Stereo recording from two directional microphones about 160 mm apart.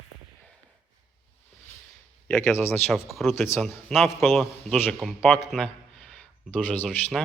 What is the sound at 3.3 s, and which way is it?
Speech, 15° left (ahead or behind).